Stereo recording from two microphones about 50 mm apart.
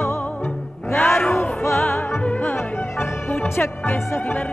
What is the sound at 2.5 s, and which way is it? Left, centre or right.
Music, left.